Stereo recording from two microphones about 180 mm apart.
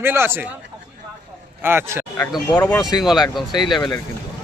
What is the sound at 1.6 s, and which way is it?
Speech, 15° right (ahead or behind).